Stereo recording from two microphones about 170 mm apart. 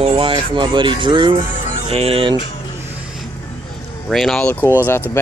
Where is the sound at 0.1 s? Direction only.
30° right (ahead or behind).